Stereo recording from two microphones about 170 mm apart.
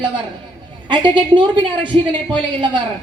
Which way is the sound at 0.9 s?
25° right (ahead or behind).